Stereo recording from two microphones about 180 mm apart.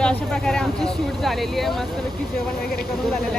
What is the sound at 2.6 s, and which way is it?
Speech, 60° left (ahead or behind).